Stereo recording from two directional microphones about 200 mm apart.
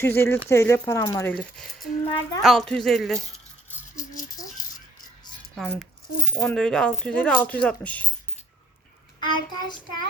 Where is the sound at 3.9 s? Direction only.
40° left (ahead or behind).